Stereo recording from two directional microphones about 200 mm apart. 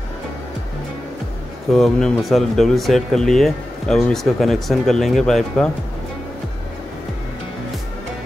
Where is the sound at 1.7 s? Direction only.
Centre (ahead or behind).